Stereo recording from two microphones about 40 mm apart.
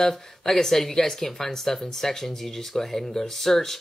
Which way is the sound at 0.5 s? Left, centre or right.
Centre.